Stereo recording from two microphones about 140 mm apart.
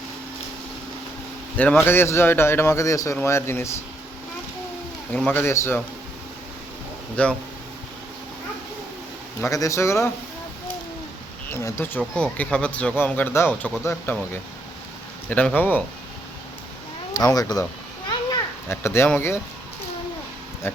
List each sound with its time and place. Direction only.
1.5 s speech: 10° left (ahead or behind)
5.1 s speech: 15° left (ahead or behind)
7.2 s speech: 10° left (ahead or behind)
9.4 s speech: 25° left (ahead or behind)
11.4 s speech: 20° left (ahead or behind)
15.3 s speech: 10° left (ahead or behind)
17.2 s speech: 25° left (ahead or behind)
18.1 s children playing: 25° left (ahead or behind)
20.6 s speech: 15° left (ahead or behind)